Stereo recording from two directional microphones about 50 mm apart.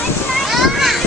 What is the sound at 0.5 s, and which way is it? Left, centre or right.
Children playing, centre.